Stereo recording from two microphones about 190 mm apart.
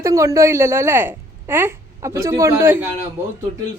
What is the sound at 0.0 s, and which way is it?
A woman's voice, 15° right (ahead or behind).